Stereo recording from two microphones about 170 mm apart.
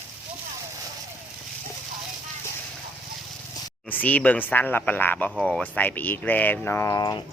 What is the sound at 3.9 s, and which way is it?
Speech, 10° left (ahead or behind).